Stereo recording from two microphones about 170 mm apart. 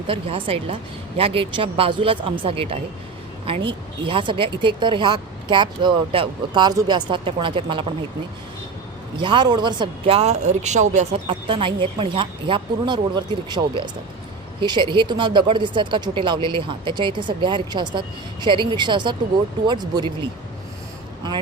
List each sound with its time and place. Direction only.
0.1 s a woman's voice: 30° right (ahead or behind)
9.1 s a woman's voice: 30° right (ahead or behind); by 11.2 s 45° right (ahead or behind)
11.3 s speech: 30° right (ahead or behind)